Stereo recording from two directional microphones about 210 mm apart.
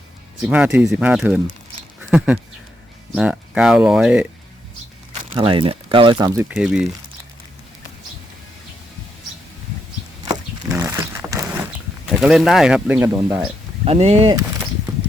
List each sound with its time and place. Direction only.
0.4 s speech: 5° right (ahead or behind)
5.3 s speech: 25° right (ahead or behind); by 6.8 s 5° right (ahead or behind)
10.7 s wild animals: 15° right (ahead or behind)
12.0 s speech: centre (ahead or behind)
13.8 s speech: 30° right (ahead or behind)